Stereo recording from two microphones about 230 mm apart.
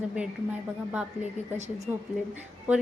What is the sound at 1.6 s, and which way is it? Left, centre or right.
Speech, right.